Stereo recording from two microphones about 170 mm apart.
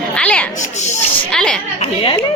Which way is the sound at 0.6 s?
45° left (ahead or behind).